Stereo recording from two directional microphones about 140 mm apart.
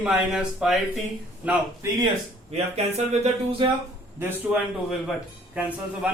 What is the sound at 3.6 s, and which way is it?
Speech, 35° right (ahead or behind).